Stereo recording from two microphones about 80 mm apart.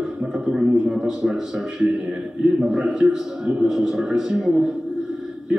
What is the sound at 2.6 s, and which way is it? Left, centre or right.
A man's voice, centre.